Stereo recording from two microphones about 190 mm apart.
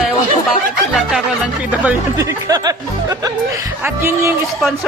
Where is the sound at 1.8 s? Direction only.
15° right (ahead or behind).